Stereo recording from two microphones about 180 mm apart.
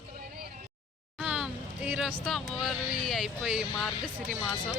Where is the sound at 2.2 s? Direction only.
Centre (ahead or behind).